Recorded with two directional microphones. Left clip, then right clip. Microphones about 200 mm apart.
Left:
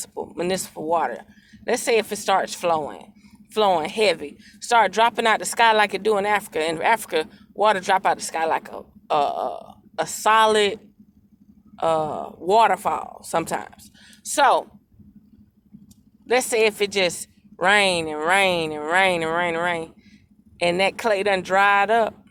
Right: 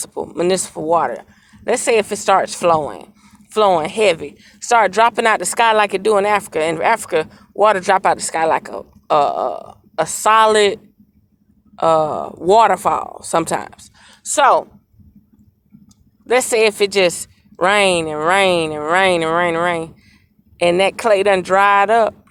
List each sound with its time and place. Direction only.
0.0 s a woman's voice: 30° right (ahead or behind)
11.8 s speech: 30° right (ahead or behind)
16.2 s speech: 30° right (ahead or behind)